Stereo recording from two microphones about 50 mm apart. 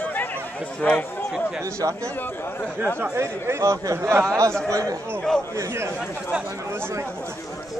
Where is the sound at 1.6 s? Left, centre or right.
Right.